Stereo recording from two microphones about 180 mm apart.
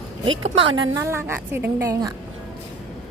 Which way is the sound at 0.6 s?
90° right.